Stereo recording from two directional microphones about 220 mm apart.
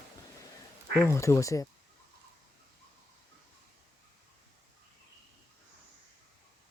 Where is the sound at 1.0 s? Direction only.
10° left (ahead or behind).